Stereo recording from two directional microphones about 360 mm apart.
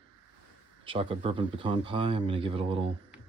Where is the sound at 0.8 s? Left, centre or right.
Centre.